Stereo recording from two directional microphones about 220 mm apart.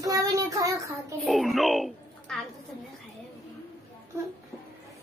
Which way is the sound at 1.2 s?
Centre (ahead or behind).